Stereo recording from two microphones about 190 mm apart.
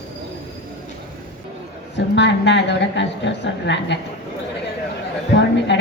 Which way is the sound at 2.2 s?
70° left (ahead or behind).